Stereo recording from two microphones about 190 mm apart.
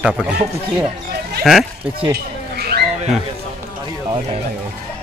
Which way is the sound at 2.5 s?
55° right (ahead or behind).